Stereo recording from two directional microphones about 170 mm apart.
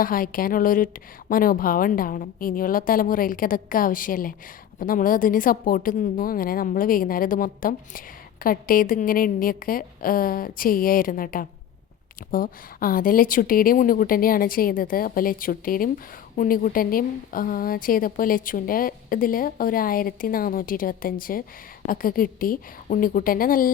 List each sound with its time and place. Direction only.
0.0 s a woman's voice: 55° left (ahead or behind)